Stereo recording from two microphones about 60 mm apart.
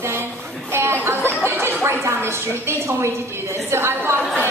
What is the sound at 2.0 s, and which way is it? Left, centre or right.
A woman's voice, right.